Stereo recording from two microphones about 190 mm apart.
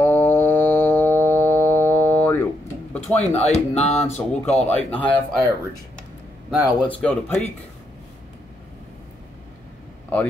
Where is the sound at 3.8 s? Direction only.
35° left (ahead or behind).